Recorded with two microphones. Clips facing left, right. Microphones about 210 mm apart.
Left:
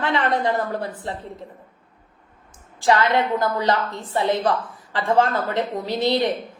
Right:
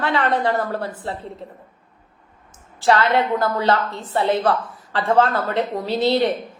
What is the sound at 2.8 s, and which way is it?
A woman's voice, 15° left (ahead or behind).